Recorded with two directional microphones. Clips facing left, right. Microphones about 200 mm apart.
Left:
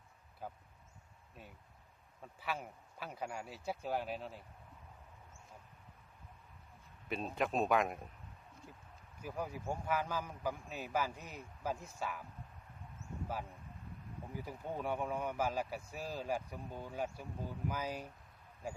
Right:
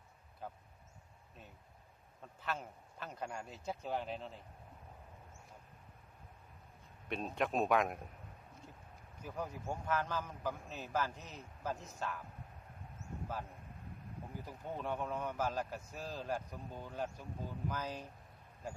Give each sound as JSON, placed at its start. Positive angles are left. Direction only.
{"t": 0.4, "sound": "a sound", "side_deg": 5}
{"t": 2.2, "sound": "a man's voice", "side_deg": 10}
{"t": 7.1, "sound": "speech", "side_deg": 0}
{"t": 9.2, "sound": "a man's voice", "side_deg": 10}
{"t": 14.3, "sound": "a man's voice", "side_deg": 10}